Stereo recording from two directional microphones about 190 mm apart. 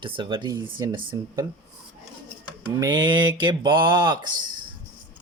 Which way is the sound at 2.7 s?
20° right (ahead or behind).